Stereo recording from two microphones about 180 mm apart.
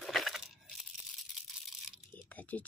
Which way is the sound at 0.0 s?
Centre (ahead or behind).